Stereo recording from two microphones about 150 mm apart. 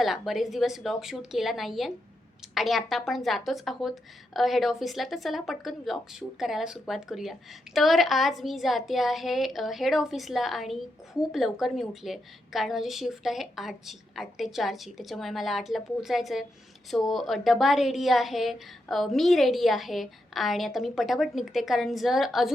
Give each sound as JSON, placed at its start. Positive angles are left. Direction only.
{"t": 0.0, "sound": "speech", "side_deg": 0}